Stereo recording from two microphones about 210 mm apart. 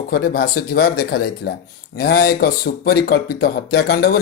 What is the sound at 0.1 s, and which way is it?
Speech, 50° left (ahead or behind).